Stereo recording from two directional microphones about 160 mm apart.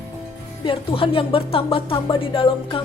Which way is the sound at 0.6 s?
35° left (ahead or behind).